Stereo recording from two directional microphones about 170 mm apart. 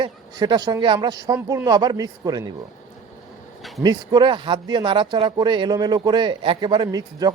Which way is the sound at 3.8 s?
25° right (ahead or behind).